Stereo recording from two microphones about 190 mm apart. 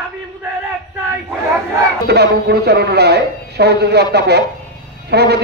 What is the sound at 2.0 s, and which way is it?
A man's voice, 60° right (ahead or behind).